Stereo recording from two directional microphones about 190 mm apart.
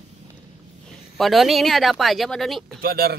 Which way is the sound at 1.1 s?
Centre (ahead or behind).